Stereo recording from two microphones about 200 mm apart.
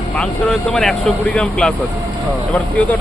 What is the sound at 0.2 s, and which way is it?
Speech, 5° left (ahead or behind).